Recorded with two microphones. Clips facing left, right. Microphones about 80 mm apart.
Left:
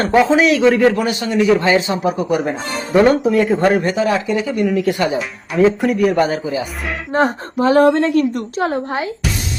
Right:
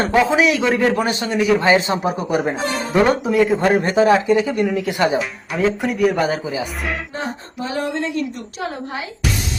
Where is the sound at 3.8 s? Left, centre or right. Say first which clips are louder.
Right 2 dB; right.